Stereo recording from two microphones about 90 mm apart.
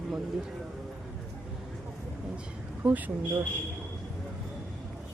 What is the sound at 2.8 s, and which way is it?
Speech, 20° right (ahead or behind).